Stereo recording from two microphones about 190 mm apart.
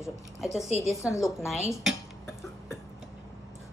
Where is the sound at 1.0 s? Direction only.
15° left (ahead or behind).